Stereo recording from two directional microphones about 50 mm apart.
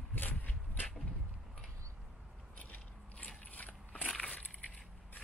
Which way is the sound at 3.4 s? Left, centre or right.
Left.